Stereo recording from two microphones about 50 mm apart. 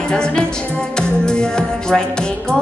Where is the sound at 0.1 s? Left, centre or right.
Centre.